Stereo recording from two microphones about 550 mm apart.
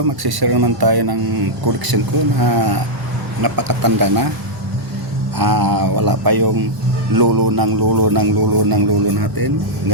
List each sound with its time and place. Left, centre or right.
0.2 s speech: right
5.4 s speech: right